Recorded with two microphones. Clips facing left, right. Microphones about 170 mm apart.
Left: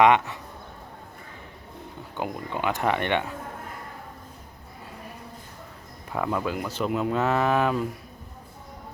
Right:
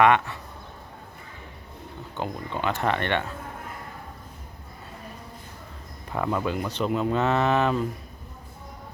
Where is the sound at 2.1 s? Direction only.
10° left (ahead or behind).